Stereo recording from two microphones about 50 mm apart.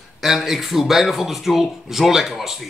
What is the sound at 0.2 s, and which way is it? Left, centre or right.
Speech, centre.